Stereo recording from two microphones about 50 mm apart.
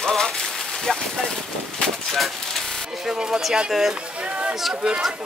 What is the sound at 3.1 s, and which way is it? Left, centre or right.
Speech, centre.